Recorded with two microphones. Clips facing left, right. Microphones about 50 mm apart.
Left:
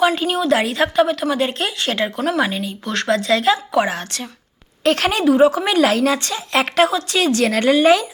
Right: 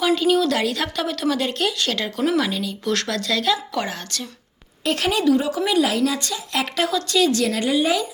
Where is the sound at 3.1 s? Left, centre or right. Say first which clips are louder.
Left 10 dB; left.